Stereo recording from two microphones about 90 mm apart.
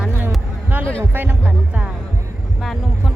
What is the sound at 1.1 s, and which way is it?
Speech, 20° right (ahead or behind).